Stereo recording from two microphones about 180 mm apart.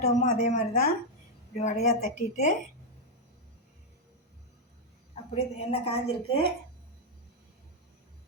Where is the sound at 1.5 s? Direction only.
40° left (ahead or behind).